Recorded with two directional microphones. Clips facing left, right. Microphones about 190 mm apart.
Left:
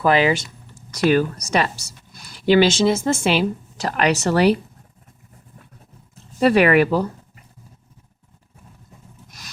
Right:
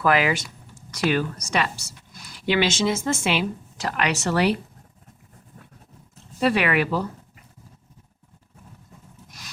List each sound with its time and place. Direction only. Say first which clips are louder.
0.0 s speech: left 4 dB; 25° left (ahead or behind)
1.1 s speech: left 6 dB; 40° left (ahead or behind)
6.4 s speech: left 7 dB; 45° left (ahead or behind)